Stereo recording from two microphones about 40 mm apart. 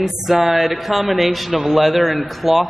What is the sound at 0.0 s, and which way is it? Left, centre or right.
Speech, centre.